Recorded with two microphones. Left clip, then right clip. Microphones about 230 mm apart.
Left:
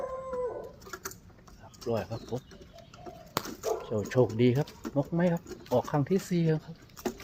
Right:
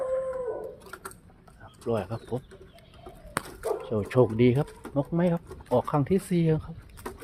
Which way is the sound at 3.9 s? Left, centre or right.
Right.